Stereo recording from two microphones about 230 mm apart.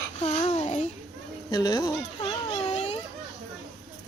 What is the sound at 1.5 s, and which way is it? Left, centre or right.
Baby cry, centre.